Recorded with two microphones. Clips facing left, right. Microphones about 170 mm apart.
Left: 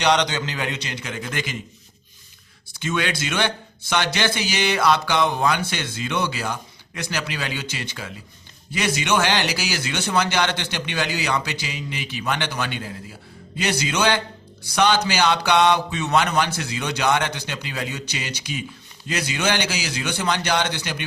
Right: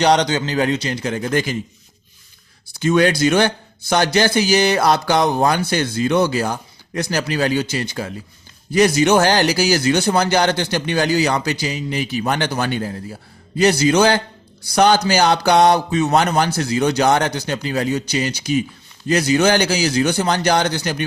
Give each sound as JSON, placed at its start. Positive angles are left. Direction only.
{"t": 0.0, "sound": "speech", "side_deg": -40}
{"t": 2.7, "sound": "speech", "side_deg": -40}